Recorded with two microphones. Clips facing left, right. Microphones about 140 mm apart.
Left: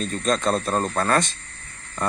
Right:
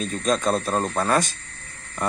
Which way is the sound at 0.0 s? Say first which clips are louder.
Even; 5° right (ahead or behind).